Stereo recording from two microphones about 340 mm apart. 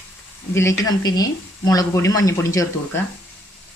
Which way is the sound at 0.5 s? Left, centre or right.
Centre.